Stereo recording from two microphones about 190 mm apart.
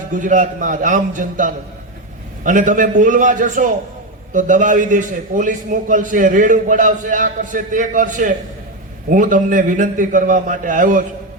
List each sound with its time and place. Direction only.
0.2 s a man's voice: 45° right (ahead or behind)